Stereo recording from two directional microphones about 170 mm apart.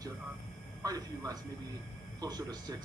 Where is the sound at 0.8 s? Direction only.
20° right (ahead or behind).